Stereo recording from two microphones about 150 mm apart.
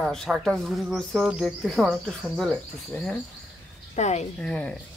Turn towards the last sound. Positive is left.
turn(degrees=5)  # may be behind; listen again after turning